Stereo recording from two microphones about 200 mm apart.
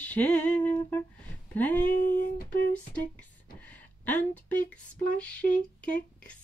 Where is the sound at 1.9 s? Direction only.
45° left (ahead or behind).